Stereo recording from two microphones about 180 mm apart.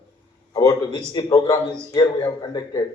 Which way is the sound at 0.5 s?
20° left (ahead or behind).